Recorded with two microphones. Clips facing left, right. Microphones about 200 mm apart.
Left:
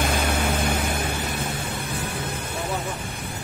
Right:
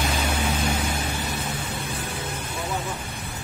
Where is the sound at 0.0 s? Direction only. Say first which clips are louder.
Left 2 dB; 50° left (ahead or behind).